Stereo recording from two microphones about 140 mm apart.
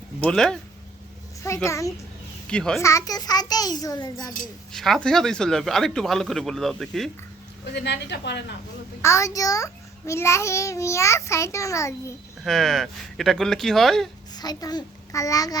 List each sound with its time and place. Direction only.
0.2 s speech: 5° left (ahead or behind)
1.6 s a child's voice: 20° left (ahead or behind)
2.5 s speech: 5° left (ahead or behind)
2.8 s a child's voice: 25° left (ahead or behind)
4.7 s speech: 5° left (ahead or behind)
9.0 s a child's voice: 20° left (ahead or behind)
12.5 s speech: centre (ahead or behind)
14.3 s a child's voice: 30° left (ahead or behind)